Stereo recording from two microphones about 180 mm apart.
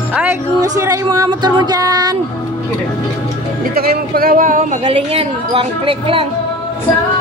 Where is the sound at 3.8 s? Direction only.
60° right (ahead or behind); by 6.3 s 30° right (ahead or behind).